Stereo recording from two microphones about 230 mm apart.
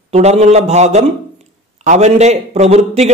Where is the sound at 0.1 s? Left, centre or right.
Right.